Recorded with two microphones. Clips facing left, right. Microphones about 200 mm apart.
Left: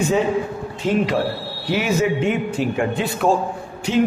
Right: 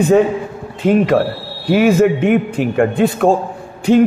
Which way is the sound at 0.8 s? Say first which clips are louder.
Right 7 dB; 55° right (ahead or behind).